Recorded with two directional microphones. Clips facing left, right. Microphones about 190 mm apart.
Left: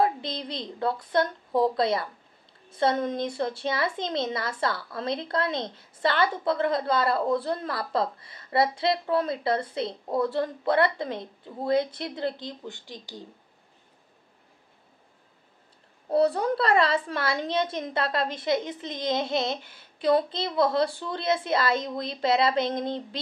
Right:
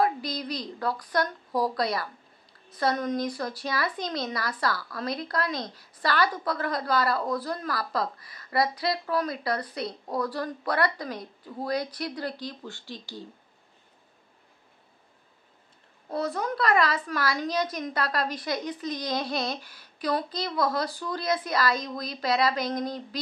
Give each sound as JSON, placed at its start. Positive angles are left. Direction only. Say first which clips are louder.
{"t": 0.0, "sound": "a woman's voice", "louder": "left 1 dB", "side_deg": 25}
{"t": 16.1, "sound": "a woman's voice", "louder": "left 7 dB", "side_deg": 30}